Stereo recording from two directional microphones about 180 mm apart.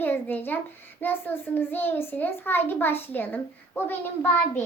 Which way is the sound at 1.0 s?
10° left (ahead or behind).